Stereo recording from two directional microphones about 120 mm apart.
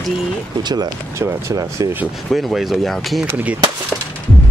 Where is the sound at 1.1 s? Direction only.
25° right (ahead or behind).